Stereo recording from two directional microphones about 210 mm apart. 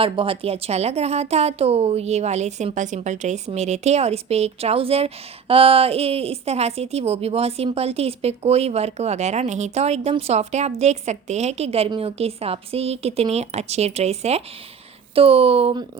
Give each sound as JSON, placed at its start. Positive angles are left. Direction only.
{"t": 0.0, "sound": "a woman's voice", "side_deg": -25}